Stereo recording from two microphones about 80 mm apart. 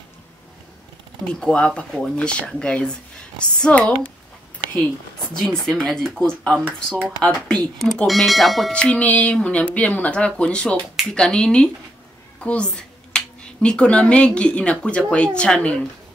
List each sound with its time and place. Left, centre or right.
1.2 s speech: centre
5.3 s speech: centre
8.7 s speech: centre